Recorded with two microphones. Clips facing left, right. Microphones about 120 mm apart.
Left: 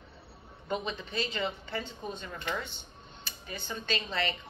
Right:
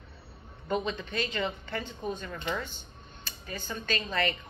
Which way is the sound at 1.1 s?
25° left (ahead or behind).